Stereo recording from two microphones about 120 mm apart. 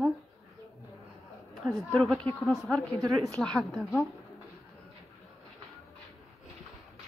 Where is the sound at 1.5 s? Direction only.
Centre (ahead or behind).